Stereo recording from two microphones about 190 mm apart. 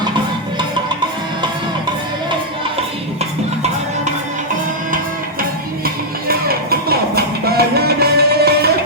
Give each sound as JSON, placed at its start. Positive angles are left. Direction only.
{"t": 5.4, "sound": "music", "side_deg": -50}